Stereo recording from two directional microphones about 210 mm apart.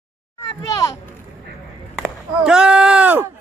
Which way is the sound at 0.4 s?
15° left (ahead or behind).